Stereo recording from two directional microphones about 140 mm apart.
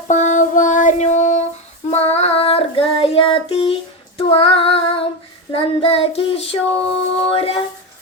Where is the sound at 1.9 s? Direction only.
50° left (ahead or behind).